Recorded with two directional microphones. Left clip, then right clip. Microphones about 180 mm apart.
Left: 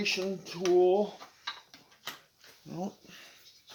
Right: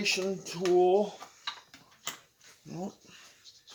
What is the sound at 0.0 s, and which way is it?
Speech, centre (ahead or behind).